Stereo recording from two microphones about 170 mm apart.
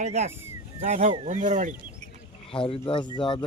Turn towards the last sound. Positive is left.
turn(degrees=30)  # may be behind; listen again after turning